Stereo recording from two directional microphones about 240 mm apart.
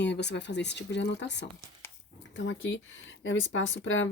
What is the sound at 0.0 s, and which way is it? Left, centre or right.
A woman's voice, left.